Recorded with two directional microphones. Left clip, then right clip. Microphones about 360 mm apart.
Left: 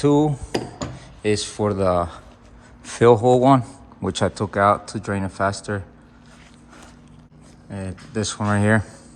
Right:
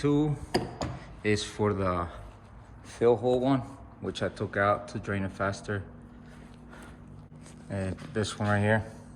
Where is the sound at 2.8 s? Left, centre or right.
Left.